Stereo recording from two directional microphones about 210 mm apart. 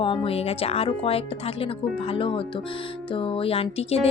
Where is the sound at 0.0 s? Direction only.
25° left (ahead or behind).